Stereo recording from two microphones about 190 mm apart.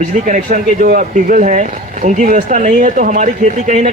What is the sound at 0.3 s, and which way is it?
Speech, 40° right (ahead or behind).